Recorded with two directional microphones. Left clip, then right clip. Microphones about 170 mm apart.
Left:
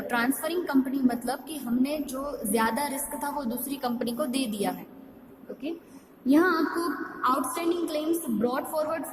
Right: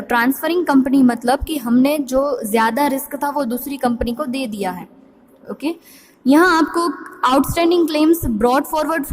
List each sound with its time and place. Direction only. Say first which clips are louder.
0.1 s a woman's voice: right 11 dB; 35° right (ahead or behind)
6.2 s a woman's voice: right 10 dB; 45° right (ahead or behind)